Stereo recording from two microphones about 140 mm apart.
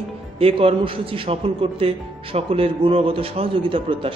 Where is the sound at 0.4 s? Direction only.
45° right (ahead or behind).